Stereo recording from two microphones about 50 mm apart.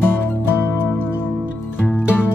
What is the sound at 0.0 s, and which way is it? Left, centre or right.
Music, left.